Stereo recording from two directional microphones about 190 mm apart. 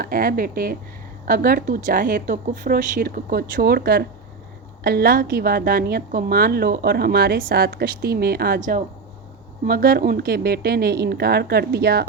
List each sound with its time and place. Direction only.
0.0 s a woman's voice: 50° right (ahead or behind)